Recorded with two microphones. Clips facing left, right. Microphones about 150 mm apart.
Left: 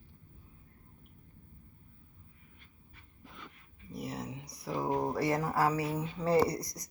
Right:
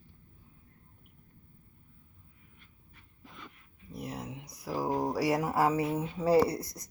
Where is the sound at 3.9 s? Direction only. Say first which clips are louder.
Even; centre (ahead or behind); by 6.0 s 25° right (ahead or behind).